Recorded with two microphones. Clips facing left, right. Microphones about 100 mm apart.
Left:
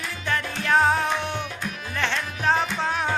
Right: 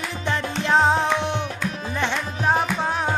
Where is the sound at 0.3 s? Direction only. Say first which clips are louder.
Right 2 dB; 20° right (ahead or behind).